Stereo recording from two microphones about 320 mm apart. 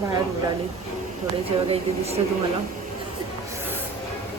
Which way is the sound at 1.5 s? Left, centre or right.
Centre.